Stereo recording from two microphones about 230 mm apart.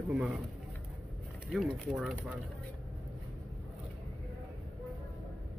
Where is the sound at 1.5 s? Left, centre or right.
Centre.